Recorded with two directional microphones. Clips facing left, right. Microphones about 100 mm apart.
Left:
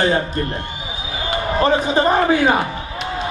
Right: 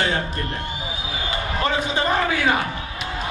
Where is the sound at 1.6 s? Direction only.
35° left (ahead or behind).